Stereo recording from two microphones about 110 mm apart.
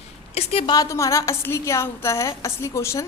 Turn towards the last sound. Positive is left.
turn(degrees=25)  # may be behind; listen again after turning